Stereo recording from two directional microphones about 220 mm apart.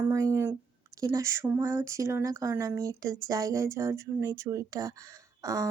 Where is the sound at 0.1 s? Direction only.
15° right (ahead or behind).